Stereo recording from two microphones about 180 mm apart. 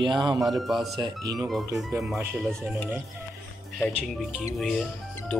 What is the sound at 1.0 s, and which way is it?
Speech, 25° right (ahead or behind).